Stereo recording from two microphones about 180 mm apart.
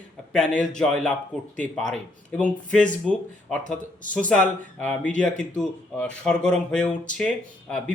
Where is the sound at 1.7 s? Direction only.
5° left (ahead or behind).